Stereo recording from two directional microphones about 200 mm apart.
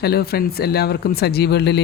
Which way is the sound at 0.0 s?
50° left (ahead or behind).